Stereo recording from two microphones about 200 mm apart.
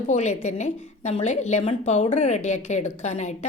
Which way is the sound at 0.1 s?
35° left (ahead or behind).